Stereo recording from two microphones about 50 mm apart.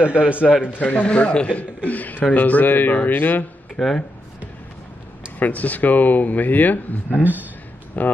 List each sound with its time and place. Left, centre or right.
0.0 s a man's voice: right
0.7 s a man's voice: left
3.8 s speech: left
5.4 s a man's voice: left